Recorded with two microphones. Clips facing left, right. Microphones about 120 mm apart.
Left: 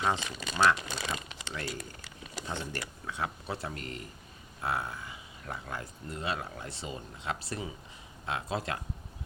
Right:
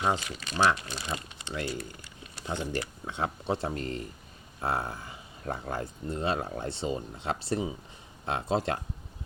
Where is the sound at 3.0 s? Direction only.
25° right (ahead or behind).